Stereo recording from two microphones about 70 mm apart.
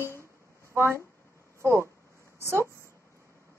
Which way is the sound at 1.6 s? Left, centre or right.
Right.